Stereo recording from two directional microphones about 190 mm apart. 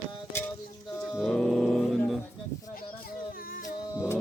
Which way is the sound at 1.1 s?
Centre (ahead or behind).